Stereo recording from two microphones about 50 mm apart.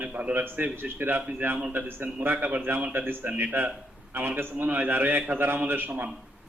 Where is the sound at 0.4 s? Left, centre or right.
Right.